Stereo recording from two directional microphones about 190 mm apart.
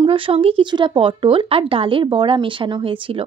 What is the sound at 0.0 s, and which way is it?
Speech, 30° right (ahead or behind).